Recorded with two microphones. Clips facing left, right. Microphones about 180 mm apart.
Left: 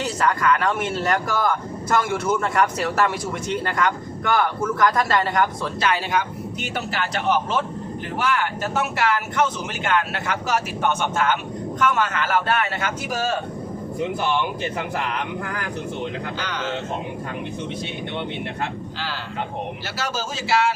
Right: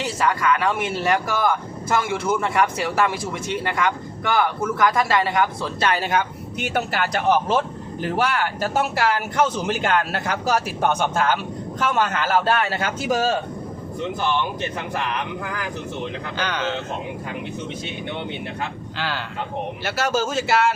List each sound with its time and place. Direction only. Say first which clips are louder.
0.2 s speech: even; 5° right (ahead or behind)
6.7 s speech: right 5 dB; 50° right (ahead or behind)
8.2 s speech: even; 35° right (ahead or behind)
16.4 s a man's voice: right 8 dB; 65° right (ahead or behind)
18.9 s a man's voice: right 4 dB; 65° right (ahead or behind)